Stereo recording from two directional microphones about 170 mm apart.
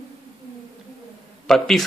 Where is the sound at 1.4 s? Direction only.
Centre (ahead or behind).